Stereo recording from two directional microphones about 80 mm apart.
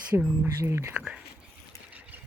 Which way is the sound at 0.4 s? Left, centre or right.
Right.